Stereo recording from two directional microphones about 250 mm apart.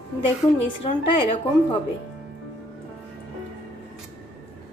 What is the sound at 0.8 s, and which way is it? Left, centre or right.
Speech, left.